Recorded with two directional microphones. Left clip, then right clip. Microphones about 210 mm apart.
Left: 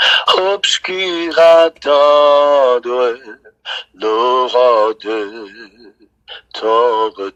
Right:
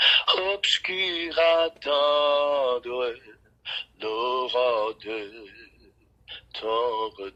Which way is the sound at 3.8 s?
30° left (ahead or behind).